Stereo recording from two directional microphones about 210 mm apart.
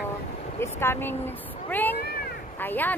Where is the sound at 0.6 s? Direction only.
10° left (ahead or behind).